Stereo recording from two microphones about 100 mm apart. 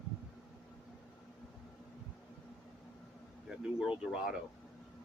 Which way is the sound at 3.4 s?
10° right (ahead or behind).